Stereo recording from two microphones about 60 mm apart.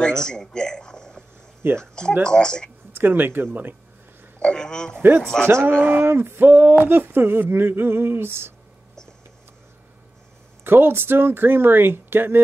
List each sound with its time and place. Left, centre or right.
0.0 s a man's voice: centre
2.9 s speech: right
4.4 s speech: centre
5.8 s speech: right
10.6 s speech: right